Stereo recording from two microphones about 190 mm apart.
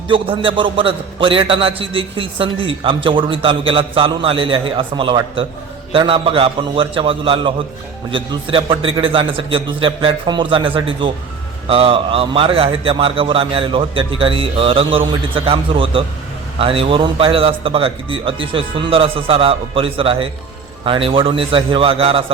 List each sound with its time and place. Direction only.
0.1 s a man's voice: 25° right (ahead or behind)